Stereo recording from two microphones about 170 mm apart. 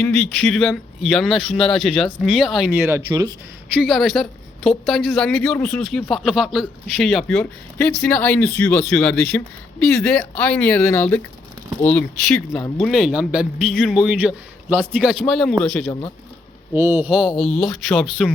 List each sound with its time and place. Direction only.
0.0 s a woman's voice: 5° left (ahead or behind)
3.1 s speech: 20° right (ahead or behind)
3.8 s a woman's voice: centre (ahead or behind)
16.7 s a woman's voice: 15° right (ahead or behind); by 18.3 s centre (ahead or behind)